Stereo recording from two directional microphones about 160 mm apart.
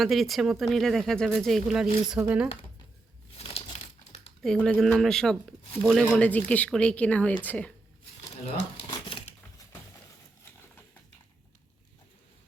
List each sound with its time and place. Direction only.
0.0 s speech: centre (ahead or behind)
3.3 s crumpling: 35° left (ahead or behind)
4.4 s speech: 5° left (ahead or behind)
8.9 s a sound: 30° left (ahead or behind)